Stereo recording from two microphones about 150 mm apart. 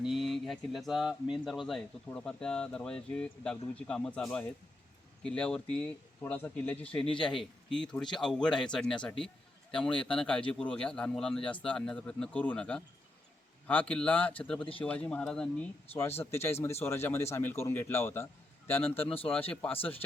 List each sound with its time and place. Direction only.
0.0 s speech: centre (ahead or behind)